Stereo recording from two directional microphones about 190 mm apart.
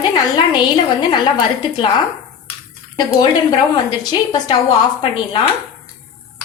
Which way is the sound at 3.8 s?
25° left (ahead or behind).